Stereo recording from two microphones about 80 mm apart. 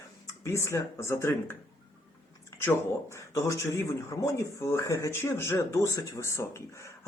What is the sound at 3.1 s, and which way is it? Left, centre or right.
Speech, left.